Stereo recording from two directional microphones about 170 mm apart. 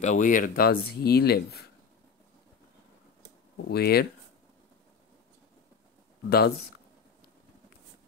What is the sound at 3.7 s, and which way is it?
Speech, 65° left (ahead or behind).